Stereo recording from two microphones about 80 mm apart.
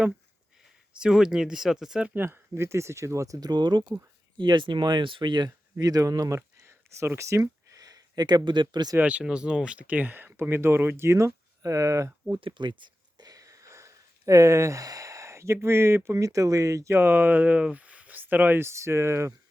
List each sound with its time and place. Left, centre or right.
0.9 s speech: centre
2.0 s speech: right
5.8 s speech: right
9.0 s speech: centre; by 12.1 s right
12.4 s speech: right
13.2 s a sound: right
15.6 s speech: right